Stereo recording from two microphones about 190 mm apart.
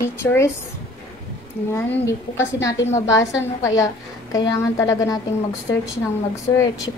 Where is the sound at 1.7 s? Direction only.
10° left (ahead or behind).